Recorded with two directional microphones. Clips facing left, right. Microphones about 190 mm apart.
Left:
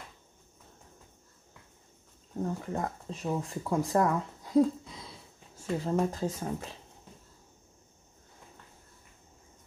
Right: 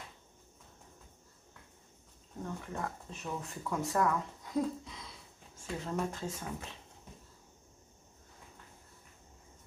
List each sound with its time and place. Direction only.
2.4 s speech: 35° left (ahead or behind)
5.9 s speech: 35° left (ahead or behind)